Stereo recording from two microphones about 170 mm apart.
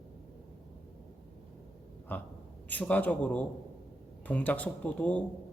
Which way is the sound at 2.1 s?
10° left (ahead or behind).